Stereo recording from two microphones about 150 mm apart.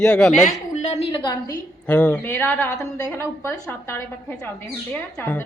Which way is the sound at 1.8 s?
10° left (ahead or behind).